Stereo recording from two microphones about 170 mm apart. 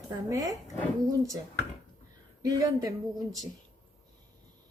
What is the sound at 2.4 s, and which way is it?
Speech, 20° right (ahead or behind).